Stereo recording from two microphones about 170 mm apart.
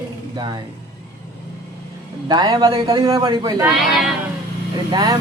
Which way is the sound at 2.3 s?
25° right (ahead or behind).